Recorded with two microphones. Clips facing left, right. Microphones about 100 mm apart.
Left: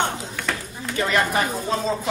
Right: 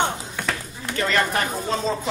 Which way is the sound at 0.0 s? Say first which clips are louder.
Right 1 dB; 5° right (ahead or behind).